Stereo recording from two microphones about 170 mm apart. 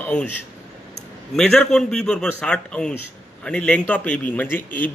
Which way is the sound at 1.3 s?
5° left (ahead or behind).